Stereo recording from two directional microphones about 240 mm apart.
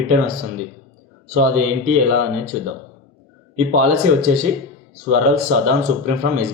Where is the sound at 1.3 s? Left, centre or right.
Right.